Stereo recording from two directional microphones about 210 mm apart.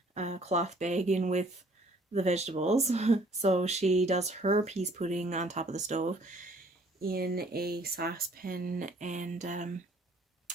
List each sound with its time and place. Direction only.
0.1 s speech: 30° right (ahead or behind)
7.0 s speech: 45° right (ahead or behind)